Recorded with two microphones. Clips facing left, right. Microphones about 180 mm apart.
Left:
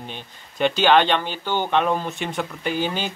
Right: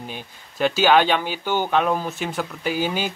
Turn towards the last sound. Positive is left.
turn(degrees=-10)  # may be behind; listen again after turning